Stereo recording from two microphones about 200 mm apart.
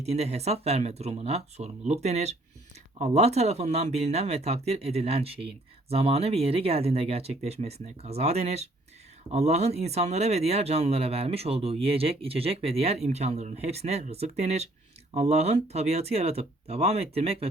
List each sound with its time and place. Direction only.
0.0 s speech: 30° right (ahead or behind)